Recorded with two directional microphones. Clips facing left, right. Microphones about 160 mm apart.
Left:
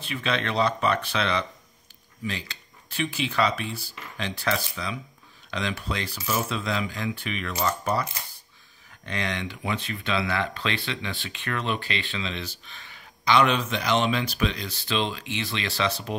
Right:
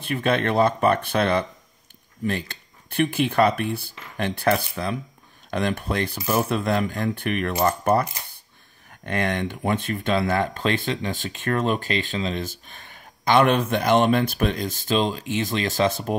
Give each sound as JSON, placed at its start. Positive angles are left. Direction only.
{"t": 0.0, "sound": "speech", "side_deg": -50}